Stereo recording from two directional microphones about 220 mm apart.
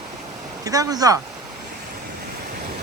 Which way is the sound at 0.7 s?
15° right (ahead or behind).